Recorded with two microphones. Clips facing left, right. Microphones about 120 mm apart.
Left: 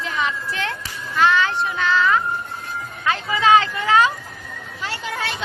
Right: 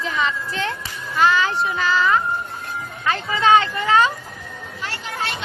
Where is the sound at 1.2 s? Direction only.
Centre (ahead or behind).